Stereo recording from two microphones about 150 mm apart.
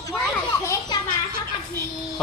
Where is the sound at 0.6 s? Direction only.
20° left (ahead or behind).